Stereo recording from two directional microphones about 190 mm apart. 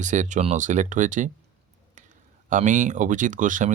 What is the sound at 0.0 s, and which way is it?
Speech, 40° right (ahead or behind).